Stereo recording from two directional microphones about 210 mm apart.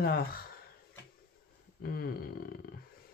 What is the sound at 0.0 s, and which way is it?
Speech, 45° left (ahead or behind).